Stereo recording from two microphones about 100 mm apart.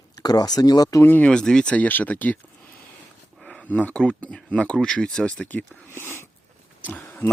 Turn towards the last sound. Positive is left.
turn(degrees=20)  # may be behind; listen again after turning